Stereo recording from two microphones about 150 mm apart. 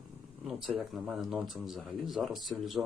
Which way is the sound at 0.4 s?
Centre (ahead or behind).